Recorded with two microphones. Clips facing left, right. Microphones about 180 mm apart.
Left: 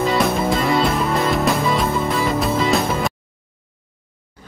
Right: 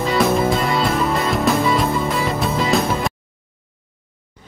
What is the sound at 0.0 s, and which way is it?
Music, centre (ahead or behind).